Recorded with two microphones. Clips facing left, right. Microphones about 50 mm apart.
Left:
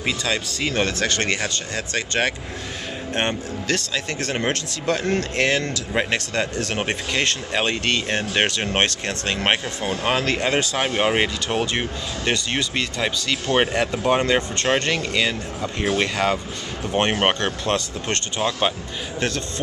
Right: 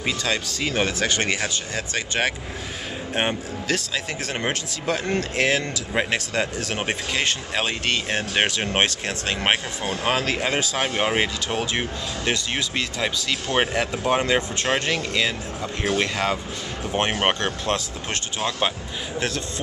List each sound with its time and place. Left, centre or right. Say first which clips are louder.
0.0 s speech: left 1 dB; centre